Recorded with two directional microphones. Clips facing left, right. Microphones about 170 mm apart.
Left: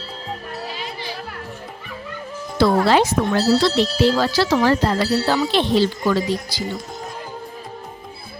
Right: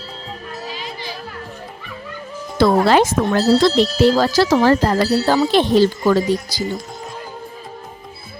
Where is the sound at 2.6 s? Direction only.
50° right (ahead or behind).